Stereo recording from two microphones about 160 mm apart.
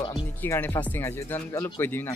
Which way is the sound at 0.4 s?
10° left (ahead or behind).